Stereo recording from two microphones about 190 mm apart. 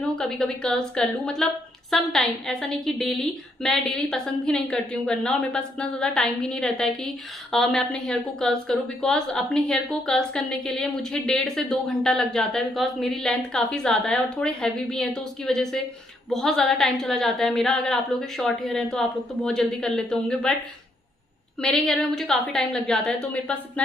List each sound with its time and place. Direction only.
0.0 s a woman's voice: centre (ahead or behind)
21.5 s a woman's voice: 5° left (ahead or behind)